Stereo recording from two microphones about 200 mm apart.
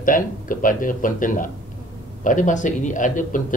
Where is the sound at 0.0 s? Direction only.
45° left (ahead or behind).